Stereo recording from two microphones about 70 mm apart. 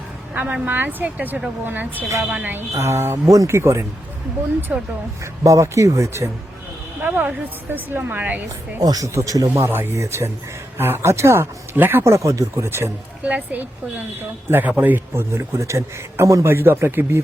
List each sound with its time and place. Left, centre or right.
0.3 s speech: right
2.7 s a man's voice: right
4.7 s speech: centre
5.2 s speech: right
7.0 s speech: right
8.8 s a man's voice: right
9.6 s a man's voice: right
12.1 s speech: right
13.2 s a man's voice: right
16.5 s a man's voice: right